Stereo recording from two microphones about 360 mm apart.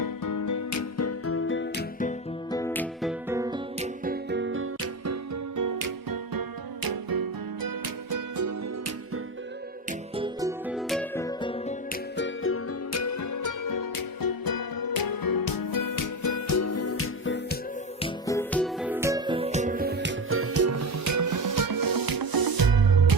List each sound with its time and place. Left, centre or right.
0.0 s music: left
2.5 s music: centre
4.0 s music: right
6.8 s music: right
8.1 s music: right
10.2 s music: centre
12.1 s music: left
18.0 s music: centre; by 23.1 s right